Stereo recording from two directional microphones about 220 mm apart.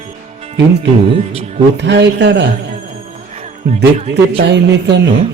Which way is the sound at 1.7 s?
50° right (ahead or behind).